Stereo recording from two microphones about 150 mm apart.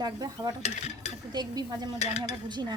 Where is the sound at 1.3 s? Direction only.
30° right (ahead or behind).